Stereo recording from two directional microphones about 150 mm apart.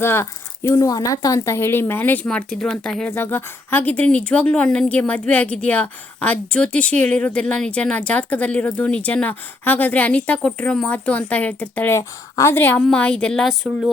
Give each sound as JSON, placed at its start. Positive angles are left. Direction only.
{"t": 0.0, "sound": "speech", "side_deg": 15}